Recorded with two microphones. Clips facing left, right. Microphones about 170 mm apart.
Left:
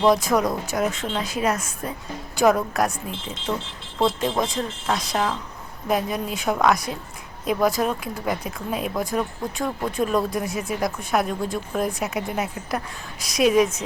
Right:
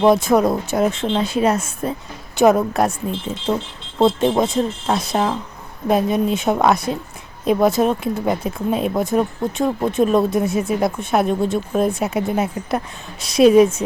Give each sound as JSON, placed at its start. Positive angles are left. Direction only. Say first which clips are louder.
{"t": 0.1, "sound": "speech", "louder": "right 5 dB", "side_deg": -25}